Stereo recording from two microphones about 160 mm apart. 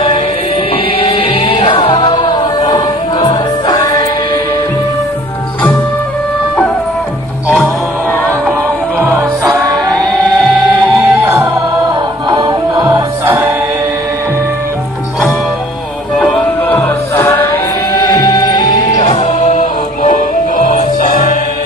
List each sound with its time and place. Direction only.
0.9 s music: 40° left (ahead or behind)
7.4 s music: 10° left (ahead or behind)
9.9 s music: centre (ahead or behind)
10.7 s music: 15° right (ahead or behind)
16.2 s music: 10° left (ahead or behind)
18.1 s music: 25° left (ahead or behind)
18.9 s music: 45° left (ahead or behind)